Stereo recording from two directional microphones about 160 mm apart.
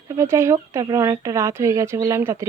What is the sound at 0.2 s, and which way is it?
Speech, 15° right (ahead or behind).